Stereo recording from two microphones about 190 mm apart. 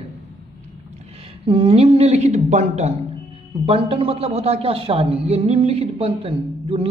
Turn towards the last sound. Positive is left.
turn(degrees=-30)  # may be behind; listen again after turning